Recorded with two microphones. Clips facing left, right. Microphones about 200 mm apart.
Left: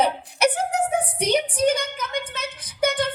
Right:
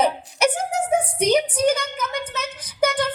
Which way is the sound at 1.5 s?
30° left (ahead or behind).